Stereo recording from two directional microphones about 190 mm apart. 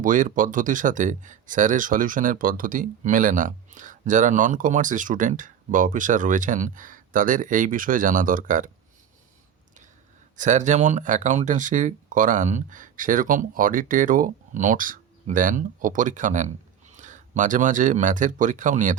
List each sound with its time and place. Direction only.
0.0 s speech: 45° right (ahead or behind)
10.3 s speech: 40° right (ahead or behind)